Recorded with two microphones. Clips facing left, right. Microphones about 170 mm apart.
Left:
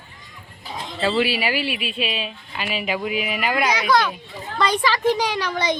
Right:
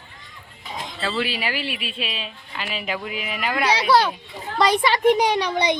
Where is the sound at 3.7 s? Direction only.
30° right (ahead or behind).